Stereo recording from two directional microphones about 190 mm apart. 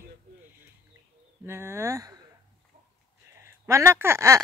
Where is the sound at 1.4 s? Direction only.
15° right (ahead or behind).